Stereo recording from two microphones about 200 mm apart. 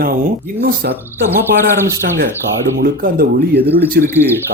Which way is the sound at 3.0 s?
50° right (ahead or behind).